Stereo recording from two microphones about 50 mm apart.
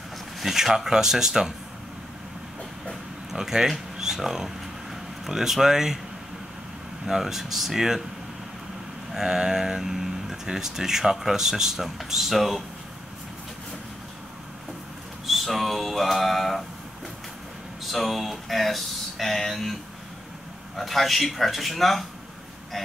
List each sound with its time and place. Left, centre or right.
0.4 s speech: centre
3.3 s speech: centre
7.1 s speech: centre
9.1 s speech: centre
15.2 s a sound: centre
17.9 s speech: centre